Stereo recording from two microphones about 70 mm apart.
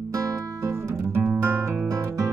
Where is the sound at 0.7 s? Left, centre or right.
Right.